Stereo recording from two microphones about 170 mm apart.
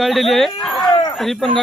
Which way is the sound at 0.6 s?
Centre (ahead or behind).